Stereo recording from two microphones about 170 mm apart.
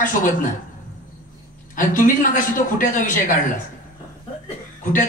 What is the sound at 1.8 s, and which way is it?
A man's voice, 50° left (ahead or behind).